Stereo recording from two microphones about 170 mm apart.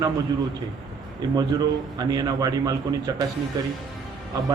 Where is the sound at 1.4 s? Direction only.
25° right (ahead or behind).